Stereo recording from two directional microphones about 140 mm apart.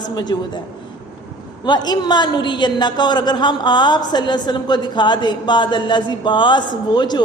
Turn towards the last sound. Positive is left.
turn(degrees=30)  # may be behind; listen again after turning